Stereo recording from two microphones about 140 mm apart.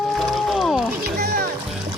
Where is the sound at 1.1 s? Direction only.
90° right.